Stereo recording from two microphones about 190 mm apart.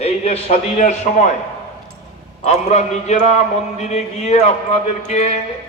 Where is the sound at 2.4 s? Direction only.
35° left (ahead or behind).